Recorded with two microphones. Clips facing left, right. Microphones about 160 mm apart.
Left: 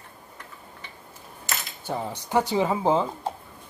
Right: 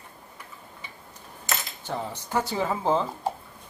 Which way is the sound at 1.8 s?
10° left (ahead or behind).